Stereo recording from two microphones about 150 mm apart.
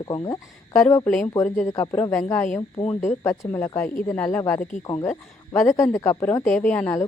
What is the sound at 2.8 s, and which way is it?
Speech, 45° left (ahead or behind).